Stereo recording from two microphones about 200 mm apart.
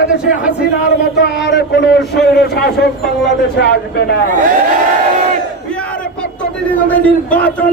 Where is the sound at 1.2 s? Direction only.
55° left (ahead or behind).